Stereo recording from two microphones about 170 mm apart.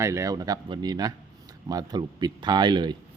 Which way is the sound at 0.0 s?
15° right (ahead or behind).